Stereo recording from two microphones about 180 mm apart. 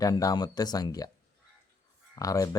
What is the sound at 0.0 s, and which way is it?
Speech, 20° left (ahead or behind).